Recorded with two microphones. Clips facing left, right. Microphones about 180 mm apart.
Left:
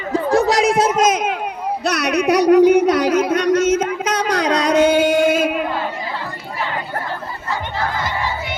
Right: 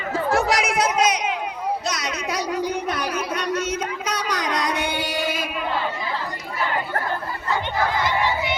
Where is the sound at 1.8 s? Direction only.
65° left (ahead or behind); by 4.9 s 80° left.